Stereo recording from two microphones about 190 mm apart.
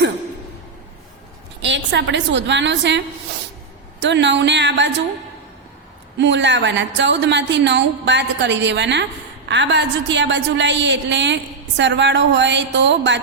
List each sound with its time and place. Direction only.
1.6 s a woman's voice: 70° right (ahead or behind)
4.0 s a woman's voice: 70° right (ahead or behind)
6.1 s a woman's voice: 70° right (ahead or behind)